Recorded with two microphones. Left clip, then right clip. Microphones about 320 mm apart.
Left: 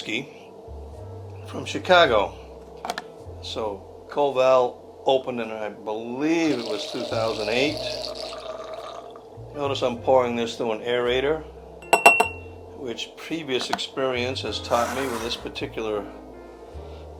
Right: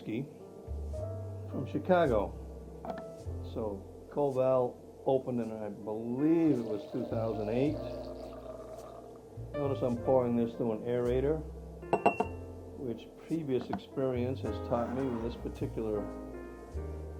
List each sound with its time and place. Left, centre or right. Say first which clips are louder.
0.0 s speech: left 10 dB; centre
1.5 s speech: left 11 dB; centre
3.4 s speech: left 9 dB; centre
11.9 s glass: left 13 dB; centre
12.8 s speech: left 10 dB; centre